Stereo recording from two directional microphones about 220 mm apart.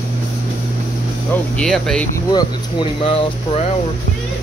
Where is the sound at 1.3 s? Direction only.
5° left (ahead or behind).